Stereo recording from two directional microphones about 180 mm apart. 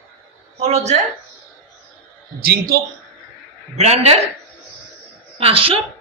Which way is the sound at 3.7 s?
40° right (ahead or behind).